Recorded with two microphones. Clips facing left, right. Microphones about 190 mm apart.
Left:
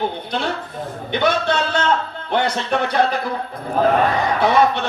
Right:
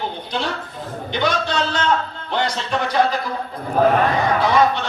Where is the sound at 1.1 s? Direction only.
60° left (ahead or behind).